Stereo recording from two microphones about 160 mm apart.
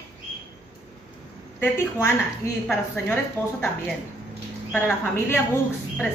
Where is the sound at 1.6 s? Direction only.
15° left (ahead or behind).